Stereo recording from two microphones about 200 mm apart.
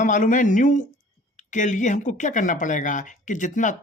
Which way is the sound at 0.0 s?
40° left (ahead or behind).